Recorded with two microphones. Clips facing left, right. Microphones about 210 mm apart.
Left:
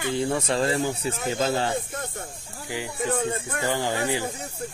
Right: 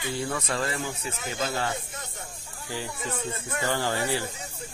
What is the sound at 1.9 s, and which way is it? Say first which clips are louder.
Snake: left 7 dB; 55° left (ahead or behind).